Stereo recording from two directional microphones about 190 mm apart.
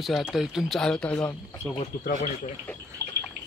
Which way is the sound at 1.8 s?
40° left (ahead or behind).